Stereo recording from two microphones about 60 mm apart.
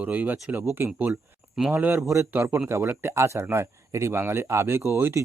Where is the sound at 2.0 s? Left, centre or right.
Right.